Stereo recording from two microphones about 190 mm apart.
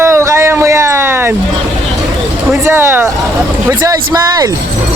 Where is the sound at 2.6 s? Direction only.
10° right (ahead or behind).